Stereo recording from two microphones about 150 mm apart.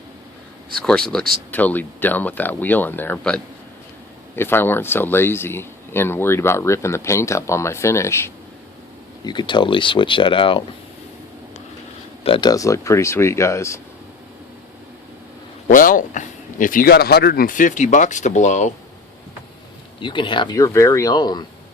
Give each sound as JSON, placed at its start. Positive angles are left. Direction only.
{"t": 0.8, "sound": "speech", "side_deg": 5}
{"t": 9.2, "sound": "speech", "side_deg": 30}
{"t": 12.2, "sound": "speech", "side_deg": 35}
{"t": 15.7, "sound": "speech", "side_deg": 65}
{"t": 20.0, "sound": "speech", "side_deg": 30}